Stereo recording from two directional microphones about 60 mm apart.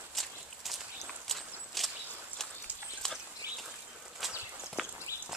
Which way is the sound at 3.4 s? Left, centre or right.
Right.